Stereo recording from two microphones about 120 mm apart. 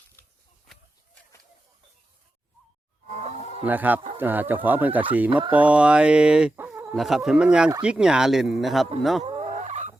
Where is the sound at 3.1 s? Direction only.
65° right (ahead or behind).